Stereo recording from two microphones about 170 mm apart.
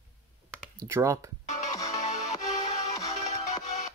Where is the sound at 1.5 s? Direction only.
40° left (ahead or behind).